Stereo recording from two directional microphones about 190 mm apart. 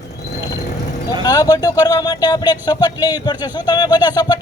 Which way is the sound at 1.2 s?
20° left (ahead or behind).